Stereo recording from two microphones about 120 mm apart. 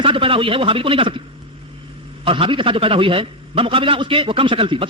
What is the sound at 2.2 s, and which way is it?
A man's voice, 45° right (ahead or behind).